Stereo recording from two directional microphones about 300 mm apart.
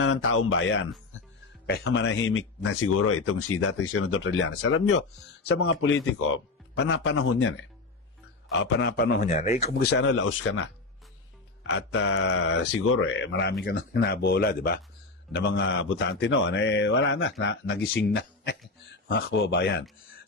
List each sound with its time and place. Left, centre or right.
0.0 s speech: left
5.5 s mantra: left
11.7 s mantra: left